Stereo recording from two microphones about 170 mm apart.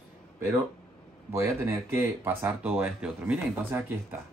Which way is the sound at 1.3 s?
15° right (ahead or behind).